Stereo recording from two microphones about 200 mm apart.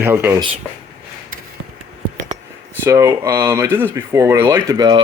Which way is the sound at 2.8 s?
15° right (ahead or behind).